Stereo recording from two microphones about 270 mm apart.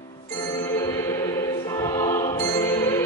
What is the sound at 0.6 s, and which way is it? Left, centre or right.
Music, centre.